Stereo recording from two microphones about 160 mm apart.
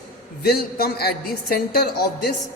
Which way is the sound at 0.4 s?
75° left (ahead or behind).